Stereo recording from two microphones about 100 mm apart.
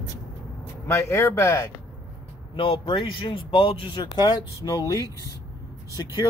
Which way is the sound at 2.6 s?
60° left (ahead or behind).